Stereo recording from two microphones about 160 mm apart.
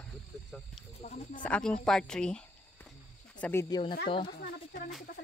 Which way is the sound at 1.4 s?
5° left (ahead or behind).